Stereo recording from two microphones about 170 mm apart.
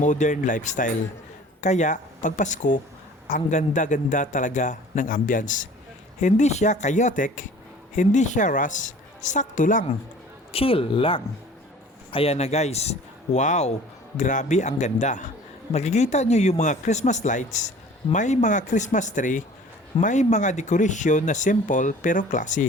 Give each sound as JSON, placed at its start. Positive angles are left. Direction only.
{"t": 0.0, "sound": "speech", "side_deg": 45}
{"t": 10.5, "sound": "speech", "side_deg": 35}